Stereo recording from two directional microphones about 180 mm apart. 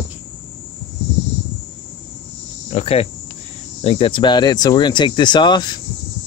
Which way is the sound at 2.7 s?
35° left (ahead or behind).